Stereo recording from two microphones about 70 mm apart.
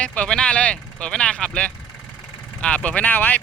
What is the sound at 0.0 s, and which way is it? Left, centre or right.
Speech, centre.